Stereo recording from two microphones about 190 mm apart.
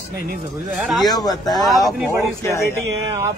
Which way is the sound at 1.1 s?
20° left (ahead or behind).